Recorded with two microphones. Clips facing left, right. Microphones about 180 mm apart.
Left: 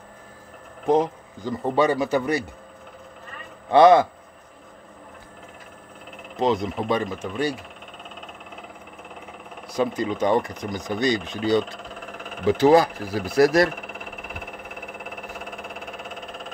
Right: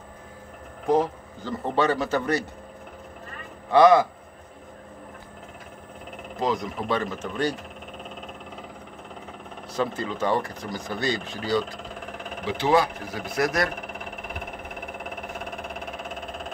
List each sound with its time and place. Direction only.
0.8 s speech: 20° left (ahead or behind)
3.7 s speech: 25° left (ahead or behind)
6.4 s speech: 25° left (ahead or behind)
9.7 s speech: 15° left (ahead or behind)
12.4 s speech: 40° left (ahead or behind)